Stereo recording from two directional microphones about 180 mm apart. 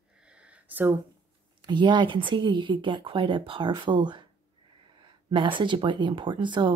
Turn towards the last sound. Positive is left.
turn(degrees=-25)  # may be behind; listen again after turning